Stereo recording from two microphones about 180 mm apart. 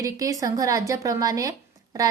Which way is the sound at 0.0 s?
20° right (ahead or behind).